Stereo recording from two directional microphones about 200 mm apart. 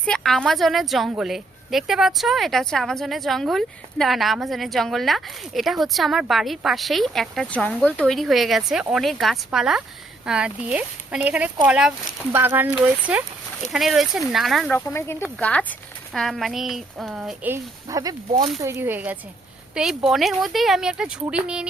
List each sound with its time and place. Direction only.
0.0 s a woman's voice: 5° left (ahead or behind)
14.8 s a woman's voice: 15° left (ahead or behind); by 18.2 s 15° right (ahead or behind)
18.3 s speech: 30° right (ahead or behind)
18.6 s a woman's voice: 10° right (ahead or behind)